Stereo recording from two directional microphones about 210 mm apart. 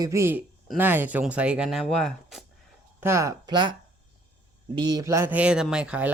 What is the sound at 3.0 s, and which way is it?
A man's voice, 15° right (ahead or behind).